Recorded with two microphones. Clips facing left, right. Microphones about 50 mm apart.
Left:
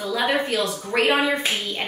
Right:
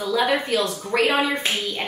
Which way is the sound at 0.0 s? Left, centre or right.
Centre.